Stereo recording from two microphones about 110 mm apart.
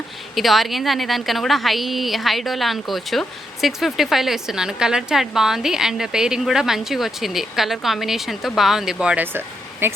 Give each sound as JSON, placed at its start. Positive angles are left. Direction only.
{"t": 0.3, "sound": "a woman's voice", "side_deg": 0}